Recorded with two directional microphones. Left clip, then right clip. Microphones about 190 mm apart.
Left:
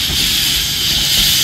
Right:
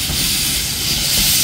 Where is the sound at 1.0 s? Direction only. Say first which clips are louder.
Left 4 dB; 15° right (ahead or behind).